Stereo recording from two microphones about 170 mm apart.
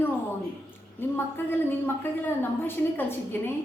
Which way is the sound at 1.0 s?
10° left (ahead or behind).